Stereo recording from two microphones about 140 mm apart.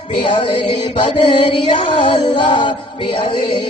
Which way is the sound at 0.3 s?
35° left (ahead or behind).